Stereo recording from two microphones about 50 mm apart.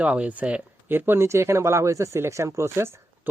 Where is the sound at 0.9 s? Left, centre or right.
Right.